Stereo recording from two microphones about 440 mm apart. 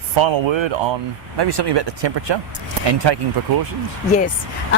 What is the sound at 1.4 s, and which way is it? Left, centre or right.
Speech, right.